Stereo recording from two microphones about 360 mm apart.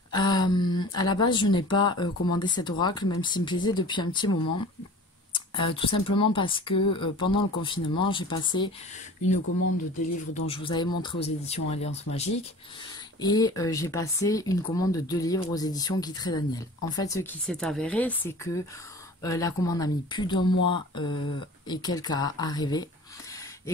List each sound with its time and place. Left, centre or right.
0.1 s speech: centre
10.3 s speech: centre